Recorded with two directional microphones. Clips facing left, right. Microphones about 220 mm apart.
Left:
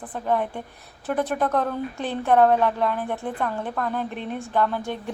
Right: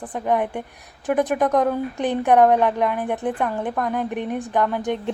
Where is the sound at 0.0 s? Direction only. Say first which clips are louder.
Right 3 dB; 15° right (ahead or behind).